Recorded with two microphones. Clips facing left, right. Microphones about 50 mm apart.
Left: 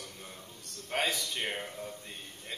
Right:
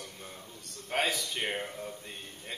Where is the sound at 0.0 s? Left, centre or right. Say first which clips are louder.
Right 1 dB; centre.